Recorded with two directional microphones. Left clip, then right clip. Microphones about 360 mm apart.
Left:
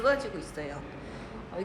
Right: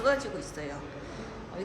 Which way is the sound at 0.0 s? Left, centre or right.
Centre.